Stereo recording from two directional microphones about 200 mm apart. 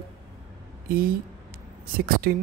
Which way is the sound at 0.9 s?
45° right (ahead or behind).